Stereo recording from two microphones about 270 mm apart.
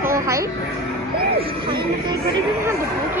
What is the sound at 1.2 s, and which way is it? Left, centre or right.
Speech, right.